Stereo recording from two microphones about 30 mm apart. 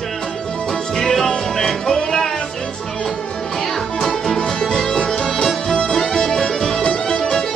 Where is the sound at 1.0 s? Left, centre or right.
Centre.